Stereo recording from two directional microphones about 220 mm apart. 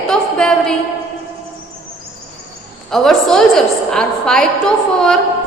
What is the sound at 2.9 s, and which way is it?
A woman's voice, centre (ahead or behind).